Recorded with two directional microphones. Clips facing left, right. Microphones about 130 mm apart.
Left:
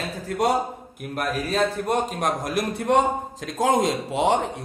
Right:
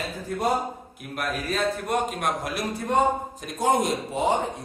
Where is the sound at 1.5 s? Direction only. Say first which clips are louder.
Left 3 dB; 30° left (ahead or behind).